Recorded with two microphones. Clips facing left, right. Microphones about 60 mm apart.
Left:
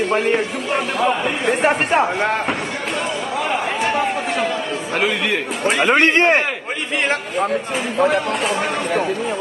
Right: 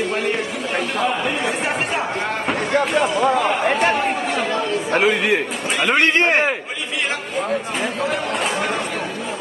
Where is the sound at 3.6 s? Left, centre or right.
Right.